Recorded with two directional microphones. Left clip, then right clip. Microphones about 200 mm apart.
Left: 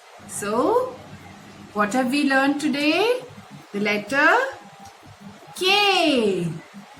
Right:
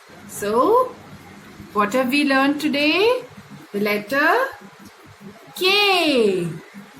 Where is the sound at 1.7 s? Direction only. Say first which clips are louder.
Right 3 dB; 15° left (ahead or behind).